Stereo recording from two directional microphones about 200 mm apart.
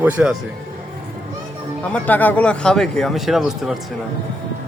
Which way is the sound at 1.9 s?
10° left (ahead or behind).